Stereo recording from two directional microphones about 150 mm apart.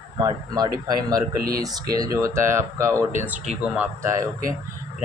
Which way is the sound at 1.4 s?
85° right.